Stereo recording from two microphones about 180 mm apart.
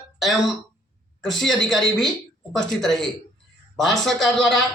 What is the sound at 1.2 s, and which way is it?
Speech, centre (ahead or behind).